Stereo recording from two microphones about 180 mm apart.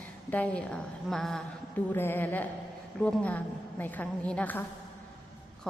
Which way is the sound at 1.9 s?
10° left (ahead or behind).